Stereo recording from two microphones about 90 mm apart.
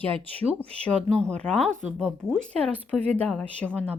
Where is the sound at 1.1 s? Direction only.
10° left (ahead or behind).